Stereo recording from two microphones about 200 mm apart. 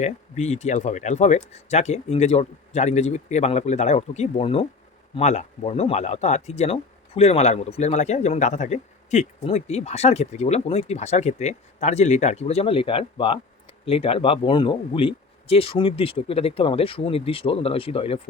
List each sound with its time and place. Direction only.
0.0 s speech: 35° left (ahead or behind)